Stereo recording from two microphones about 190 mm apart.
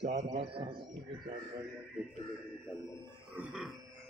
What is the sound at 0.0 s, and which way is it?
Speech, 35° right (ahead or behind).